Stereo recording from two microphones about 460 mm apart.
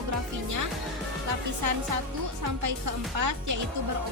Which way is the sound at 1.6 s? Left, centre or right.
Right.